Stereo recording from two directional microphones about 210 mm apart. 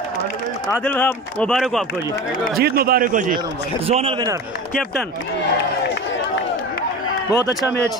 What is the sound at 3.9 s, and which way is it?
Speech, 25° right (ahead or behind).